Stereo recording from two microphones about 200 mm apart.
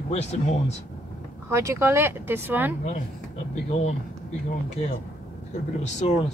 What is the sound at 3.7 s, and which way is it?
Speech, 35° left (ahead or behind).